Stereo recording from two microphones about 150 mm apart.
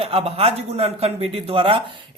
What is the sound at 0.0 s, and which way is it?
Speech, 40° right (ahead or behind).